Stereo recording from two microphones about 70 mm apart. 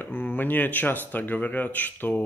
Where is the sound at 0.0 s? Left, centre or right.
Left.